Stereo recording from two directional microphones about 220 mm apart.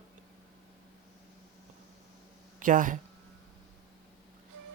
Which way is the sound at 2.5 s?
35° right (ahead or behind).